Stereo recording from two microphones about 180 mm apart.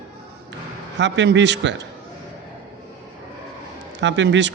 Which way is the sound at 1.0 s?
80° right.